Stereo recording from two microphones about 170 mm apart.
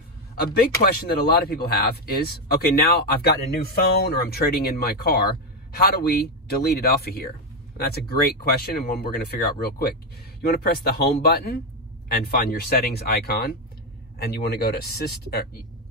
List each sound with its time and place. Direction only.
0.5 s speech: 65° left (ahead or behind)